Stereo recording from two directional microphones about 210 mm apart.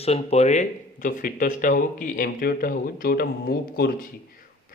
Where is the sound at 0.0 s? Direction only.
30° left (ahead or behind).